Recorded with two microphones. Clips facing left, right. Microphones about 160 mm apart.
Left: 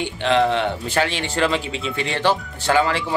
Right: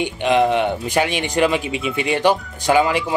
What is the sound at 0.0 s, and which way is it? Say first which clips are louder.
Speech: right 2 dB; 15° right (ahead or behind).